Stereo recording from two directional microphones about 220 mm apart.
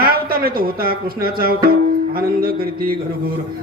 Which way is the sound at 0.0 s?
40° right (ahead or behind).